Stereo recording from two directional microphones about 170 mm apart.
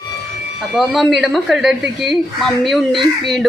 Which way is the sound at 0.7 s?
Centre (ahead or behind).